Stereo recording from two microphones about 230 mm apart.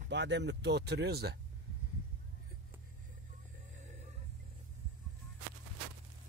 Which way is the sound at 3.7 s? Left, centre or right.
Right.